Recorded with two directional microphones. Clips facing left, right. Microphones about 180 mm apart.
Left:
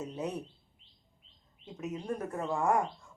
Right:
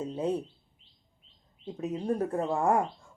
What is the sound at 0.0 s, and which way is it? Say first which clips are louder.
Speech: right 6 dB; 30° right (ahead or behind).